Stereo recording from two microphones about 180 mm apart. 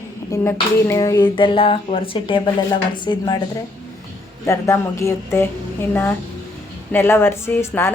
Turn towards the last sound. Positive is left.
turn(degrees=15)  # may be behind; listen again after turning